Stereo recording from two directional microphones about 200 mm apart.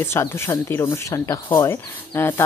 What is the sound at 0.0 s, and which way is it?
Speech, 15° left (ahead or behind).